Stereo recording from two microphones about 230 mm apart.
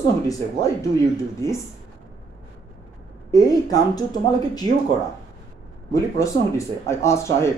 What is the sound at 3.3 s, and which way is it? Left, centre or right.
Speech, centre.